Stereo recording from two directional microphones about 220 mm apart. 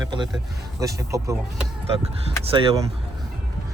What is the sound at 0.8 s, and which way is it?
Speech, 15° right (ahead or behind).